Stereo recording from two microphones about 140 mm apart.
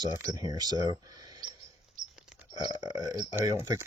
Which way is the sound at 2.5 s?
30° right (ahead or behind).